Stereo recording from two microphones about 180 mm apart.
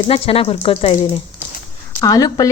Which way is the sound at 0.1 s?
35° left (ahead or behind).